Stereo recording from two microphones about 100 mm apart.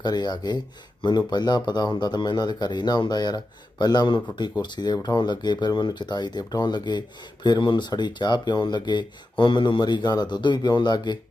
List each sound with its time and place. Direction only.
0.0 s a man's voice: 45° left (ahead or behind)